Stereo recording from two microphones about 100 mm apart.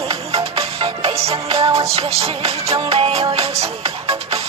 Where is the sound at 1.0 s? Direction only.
90° right.